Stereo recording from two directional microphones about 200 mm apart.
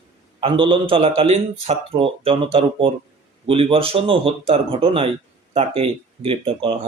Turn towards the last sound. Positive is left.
turn(degrees=-25)  # may be behind; listen again after turning